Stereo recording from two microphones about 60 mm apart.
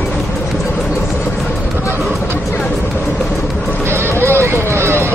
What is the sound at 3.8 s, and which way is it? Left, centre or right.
Vehicle, right.